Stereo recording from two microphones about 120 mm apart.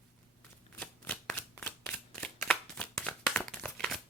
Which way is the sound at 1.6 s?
20° left (ahead or behind).